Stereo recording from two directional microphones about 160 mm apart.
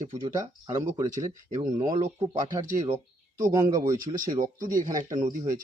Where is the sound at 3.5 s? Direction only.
25° right (ahead or behind).